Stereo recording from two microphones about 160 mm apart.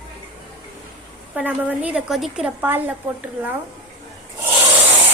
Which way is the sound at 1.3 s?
10° right (ahead or behind).